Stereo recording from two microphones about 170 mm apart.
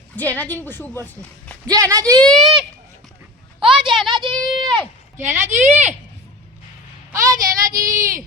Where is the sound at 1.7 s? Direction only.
20° right (ahead or behind).